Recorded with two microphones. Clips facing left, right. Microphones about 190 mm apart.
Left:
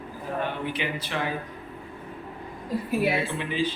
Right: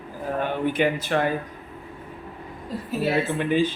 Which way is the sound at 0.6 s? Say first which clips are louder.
Right 8 dB; 50° right (ahead or behind).